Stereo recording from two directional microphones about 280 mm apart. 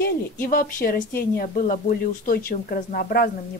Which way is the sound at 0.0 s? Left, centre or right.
Left.